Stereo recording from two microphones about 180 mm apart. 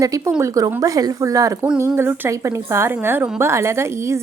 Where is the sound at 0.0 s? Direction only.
20° right (ahead or behind).